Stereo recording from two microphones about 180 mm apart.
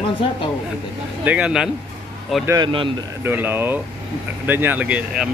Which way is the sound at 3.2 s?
10° right (ahead or behind).